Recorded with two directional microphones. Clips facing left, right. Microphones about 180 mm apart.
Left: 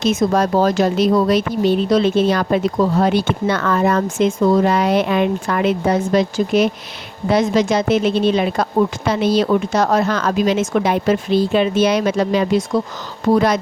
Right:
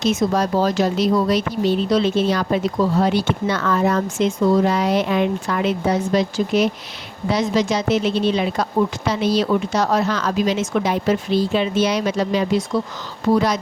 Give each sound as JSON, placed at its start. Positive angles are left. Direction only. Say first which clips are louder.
{"t": 0.0, "sound": "speech", "louder": "left 3 dB", "side_deg": 50}